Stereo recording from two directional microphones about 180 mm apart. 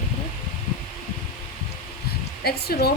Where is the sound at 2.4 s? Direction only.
60° left (ahead or behind).